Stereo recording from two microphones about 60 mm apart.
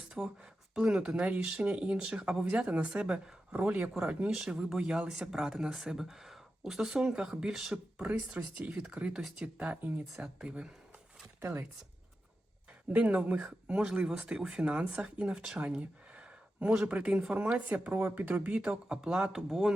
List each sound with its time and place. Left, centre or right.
0.2 s speech: centre
1.8 s speech: centre
12.9 s speech: centre
15.5 s a sound: centre
16.7 s speech: centre; by 18.3 s right
18.3 s speech: centre